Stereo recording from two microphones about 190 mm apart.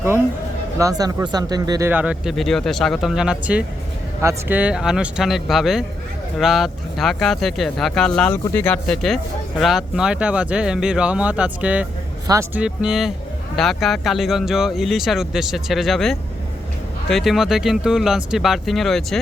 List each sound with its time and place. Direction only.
0.8 s speech: 20° right (ahead or behind)
1.9 s speech: 5° right (ahead or behind)